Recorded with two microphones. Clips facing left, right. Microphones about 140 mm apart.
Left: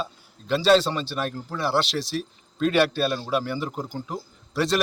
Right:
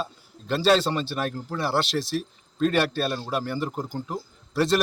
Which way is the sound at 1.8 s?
50° right (ahead or behind).